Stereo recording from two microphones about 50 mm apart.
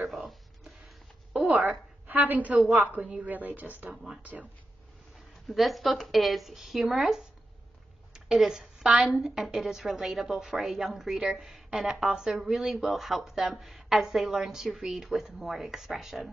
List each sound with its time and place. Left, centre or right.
0.1 s a sound: centre
1.5 s a woman's voice: right
3.9 s a woman's voice: centre
5.5 s a woman's voice: centre
8.1 s a sound: centre
9.2 s a woman's voice: centre